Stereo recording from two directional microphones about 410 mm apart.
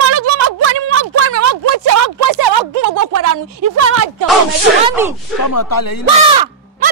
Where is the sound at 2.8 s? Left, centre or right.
Right.